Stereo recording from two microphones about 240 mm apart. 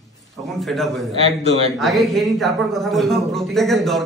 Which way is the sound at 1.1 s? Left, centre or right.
Right.